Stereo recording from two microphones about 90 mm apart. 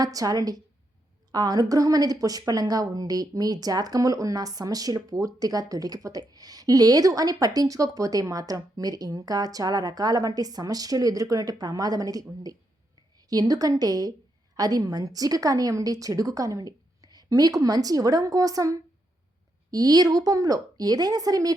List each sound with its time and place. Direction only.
0.0 s a woman's voice: 40° right (ahead or behind)